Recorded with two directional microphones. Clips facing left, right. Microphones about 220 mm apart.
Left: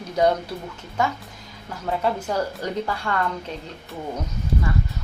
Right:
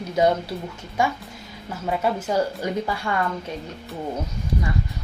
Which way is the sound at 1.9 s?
5° right (ahead or behind).